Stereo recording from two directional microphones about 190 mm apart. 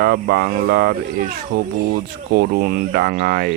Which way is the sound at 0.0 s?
55° right (ahead or behind).